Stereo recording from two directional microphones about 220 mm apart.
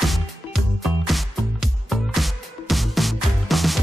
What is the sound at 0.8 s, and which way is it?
Music, centre (ahead or behind).